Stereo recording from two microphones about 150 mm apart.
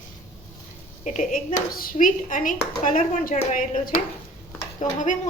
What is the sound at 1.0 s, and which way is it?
Speech, 55° left (ahead or behind).